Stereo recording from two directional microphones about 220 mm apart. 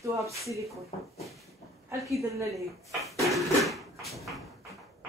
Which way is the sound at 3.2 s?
Centre (ahead or behind).